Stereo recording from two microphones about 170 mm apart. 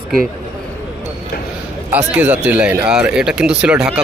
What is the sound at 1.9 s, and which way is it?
Speech, 10° right (ahead or behind).